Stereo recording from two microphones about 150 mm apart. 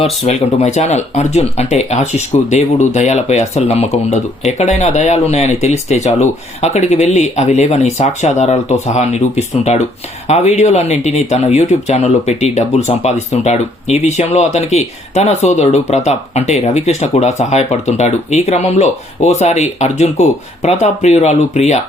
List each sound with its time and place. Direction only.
0.3 s speech: 50° left (ahead or behind)